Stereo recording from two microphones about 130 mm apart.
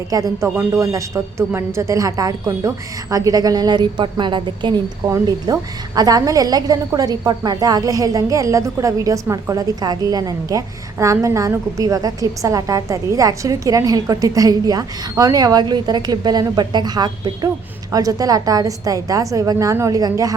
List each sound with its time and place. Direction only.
0.1 s a woman's voice: 25° right (ahead or behind)
5.0 s a woman's voice: 25° right (ahead or behind)